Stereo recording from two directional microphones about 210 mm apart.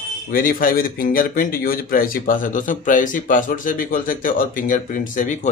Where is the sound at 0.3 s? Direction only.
40° left (ahead or behind).